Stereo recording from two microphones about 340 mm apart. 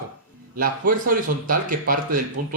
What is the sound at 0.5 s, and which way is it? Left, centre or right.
Speech, right.